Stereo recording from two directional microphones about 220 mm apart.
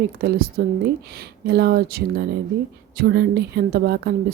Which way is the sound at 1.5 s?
45° right (ahead or behind).